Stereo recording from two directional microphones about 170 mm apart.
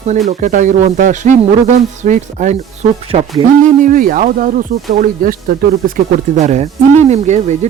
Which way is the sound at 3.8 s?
55° right (ahead or behind).